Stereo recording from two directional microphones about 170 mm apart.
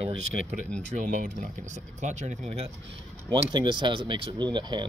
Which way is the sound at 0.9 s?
50° right (ahead or behind).